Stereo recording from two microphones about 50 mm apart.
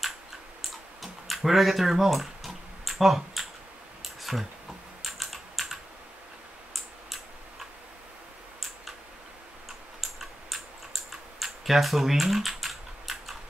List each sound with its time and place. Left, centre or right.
0.6 s tick-tock: centre
4.0 s a sound: centre
5.0 s typing: centre
10.5 s typing: centre